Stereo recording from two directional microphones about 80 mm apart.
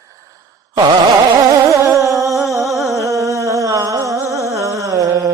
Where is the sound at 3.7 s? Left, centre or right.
Right.